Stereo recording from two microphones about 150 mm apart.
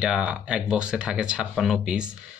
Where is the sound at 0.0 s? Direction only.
5° right (ahead or behind).